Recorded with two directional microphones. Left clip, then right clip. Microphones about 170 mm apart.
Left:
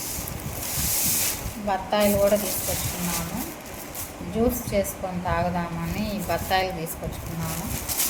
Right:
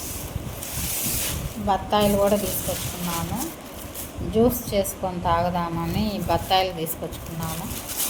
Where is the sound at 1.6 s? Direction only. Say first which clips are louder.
Right 2 dB; 40° right (ahead or behind).